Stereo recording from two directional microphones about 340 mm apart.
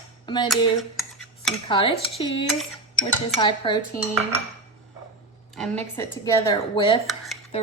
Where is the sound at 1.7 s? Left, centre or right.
Centre.